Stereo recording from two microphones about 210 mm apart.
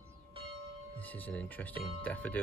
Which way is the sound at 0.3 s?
25° right (ahead or behind).